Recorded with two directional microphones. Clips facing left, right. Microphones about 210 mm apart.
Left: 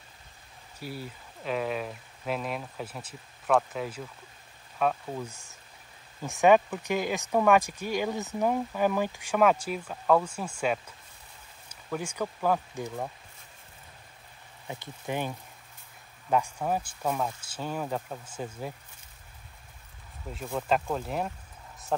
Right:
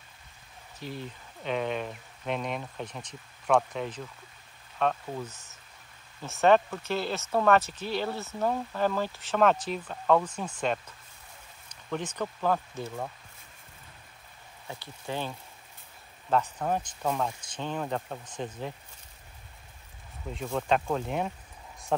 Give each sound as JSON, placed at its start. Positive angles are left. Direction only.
{"t": 0.7, "sound": "speech", "side_deg": 10}
{"t": 14.7, "sound": "speech", "side_deg": 15}
{"t": 20.3, "sound": "speech", "side_deg": 5}